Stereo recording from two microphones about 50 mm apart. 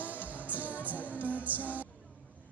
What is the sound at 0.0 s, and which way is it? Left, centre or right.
Music, right.